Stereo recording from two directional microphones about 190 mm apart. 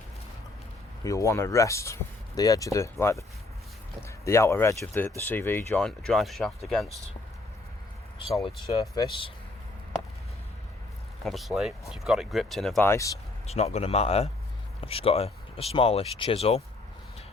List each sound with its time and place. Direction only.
1.0 s speech: 15° left (ahead or behind); by 6.9 s centre (ahead or behind)
8.4 s speech: 20° left (ahead or behind)
11.2 s speech: centre (ahead or behind)
13.5 s speech: 35° left (ahead or behind)